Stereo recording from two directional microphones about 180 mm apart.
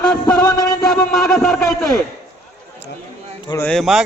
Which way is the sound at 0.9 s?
Centre (ahead or behind).